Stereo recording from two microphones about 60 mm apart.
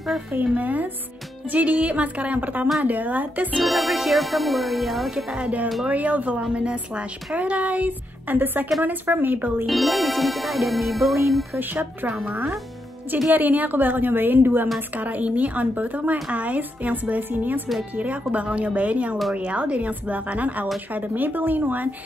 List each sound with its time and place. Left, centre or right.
0.3 s a woman's voice: right
3.5 s music: centre
5.1 s speech: centre
5.9 s a woman's voice: right
9.7 s music: centre
11.7 s a woman's voice: right
13.3 s a woman's voice: right